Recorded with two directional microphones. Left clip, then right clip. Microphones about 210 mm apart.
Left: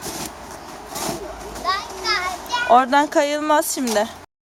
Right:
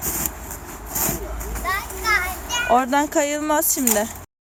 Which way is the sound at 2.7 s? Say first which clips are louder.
Left 4 dB; centre (ahead or behind).